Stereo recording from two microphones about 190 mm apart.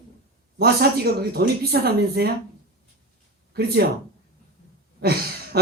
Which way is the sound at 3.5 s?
55° right (ahead or behind).